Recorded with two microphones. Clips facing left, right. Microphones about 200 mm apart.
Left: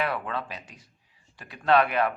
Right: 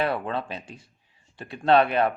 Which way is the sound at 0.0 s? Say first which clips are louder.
Right 3 dB; 30° right (ahead or behind).